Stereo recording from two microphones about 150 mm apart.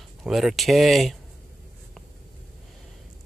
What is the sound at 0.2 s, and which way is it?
Speech, centre (ahead or behind).